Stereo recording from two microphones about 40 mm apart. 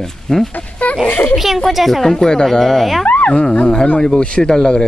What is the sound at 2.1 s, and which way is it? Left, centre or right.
Speech, centre.